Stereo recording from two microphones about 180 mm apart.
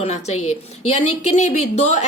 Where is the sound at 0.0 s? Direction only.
40° left (ahead or behind).